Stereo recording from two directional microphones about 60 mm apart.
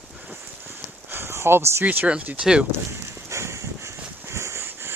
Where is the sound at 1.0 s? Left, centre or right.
Right.